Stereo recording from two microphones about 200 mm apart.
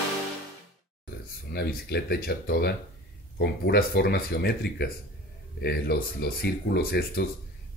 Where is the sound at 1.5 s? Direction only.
55° left (ahead or behind).